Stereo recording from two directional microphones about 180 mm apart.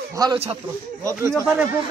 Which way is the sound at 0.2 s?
20° right (ahead or behind).